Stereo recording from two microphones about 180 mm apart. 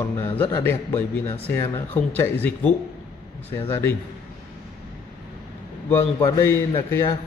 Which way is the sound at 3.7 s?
15° left (ahead or behind).